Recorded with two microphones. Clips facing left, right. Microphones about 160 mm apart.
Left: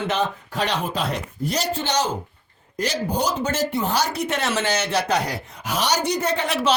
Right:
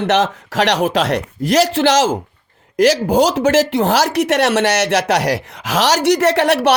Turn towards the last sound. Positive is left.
turn(degrees=-70)  # may be behind; listen again after turning